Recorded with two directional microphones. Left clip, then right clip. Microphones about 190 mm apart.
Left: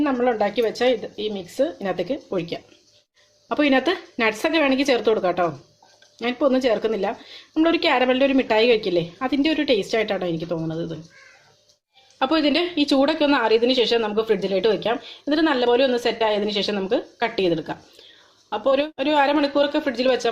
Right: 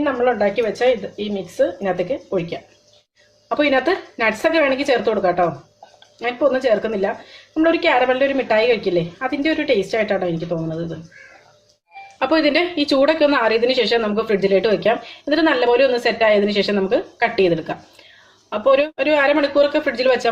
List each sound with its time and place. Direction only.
0.0 s a woman's voice: 45° left (ahead or behind)
12.2 s a woman's voice: 20° left (ahead or behind)